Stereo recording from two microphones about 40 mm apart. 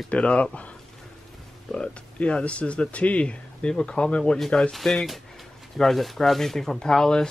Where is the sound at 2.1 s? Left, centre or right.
Left.